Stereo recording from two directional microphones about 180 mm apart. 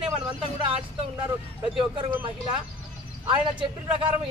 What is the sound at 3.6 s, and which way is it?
Speech, 30° right (ahead or behind).